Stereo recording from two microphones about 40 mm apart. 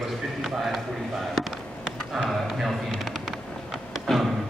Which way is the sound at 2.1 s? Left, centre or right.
Centre.